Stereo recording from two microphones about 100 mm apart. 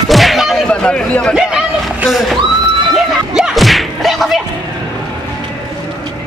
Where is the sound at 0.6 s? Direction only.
10° left (ahead or behind).